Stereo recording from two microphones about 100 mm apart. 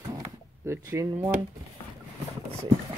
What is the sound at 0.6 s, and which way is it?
Speech, 35° right (ahead or behind).